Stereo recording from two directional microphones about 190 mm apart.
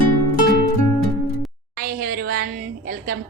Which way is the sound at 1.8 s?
50° right (ahead or behind).